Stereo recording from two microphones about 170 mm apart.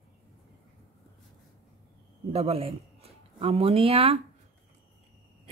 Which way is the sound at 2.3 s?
35° right (ahead or behind).